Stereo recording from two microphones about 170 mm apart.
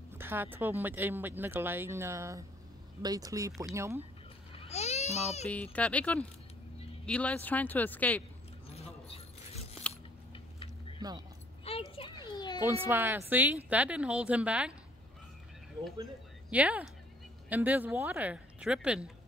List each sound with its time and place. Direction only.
0.1 s a woman's voice: 15° right (ahead or behind)
4.6 s a child's voice: 40° left (ahead or behind)
5.5 s speech: 10° left (ahead or behind)
8.7 s keys jangling: 35° left (ahead or behind)
10.3 s a sound: 30° left (ahead or behind)
11.0 s speech: 25° right (ahead or behind)
11.9 s children playing: 30° left (ahead or behind)
12.6 s a woman's voice: 15° right (ahead or behind)
16.4 s a woman's voice: 10° right (ahead or behind)